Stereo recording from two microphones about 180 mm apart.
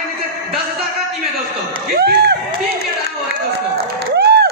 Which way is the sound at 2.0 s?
65° right (ahead or behind).